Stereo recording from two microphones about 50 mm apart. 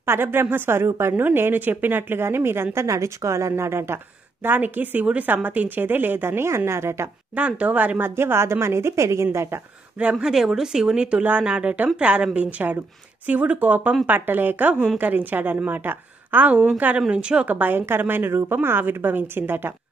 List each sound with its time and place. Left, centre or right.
0.0 s a woman's voice: right
7.3 s a woman's voice: right
8.0 s a woman's voice: right
9.9 s a woman's voice: right
10.2 s speech: centre
11.0 s a woman's voice: right
17.1 s a woman's voice: right
17.5 s a woman's voice: right